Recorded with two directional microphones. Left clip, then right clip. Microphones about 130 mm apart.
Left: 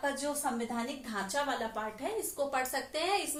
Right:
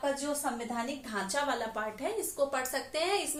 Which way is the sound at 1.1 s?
30° right (ahead or behind).